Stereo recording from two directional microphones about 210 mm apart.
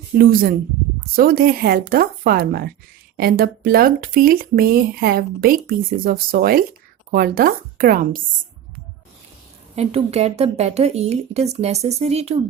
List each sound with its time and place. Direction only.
0.2 s speech: 45° right (ahead or behind)
9.7 s speech: 30° right (ahead or behind)